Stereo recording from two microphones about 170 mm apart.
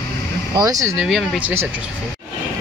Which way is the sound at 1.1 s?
5° right (ahead or behind).